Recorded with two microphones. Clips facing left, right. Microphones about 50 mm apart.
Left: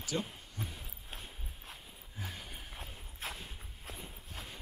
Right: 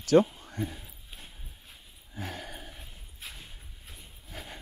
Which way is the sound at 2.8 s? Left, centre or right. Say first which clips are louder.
Left 3 dB; left.